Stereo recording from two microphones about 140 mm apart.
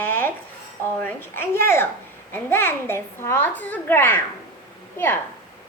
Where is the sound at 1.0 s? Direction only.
15° left (ahead or behind).